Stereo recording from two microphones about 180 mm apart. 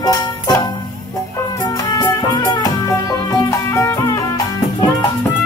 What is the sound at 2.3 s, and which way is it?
Music, 20° left (ahead or behind).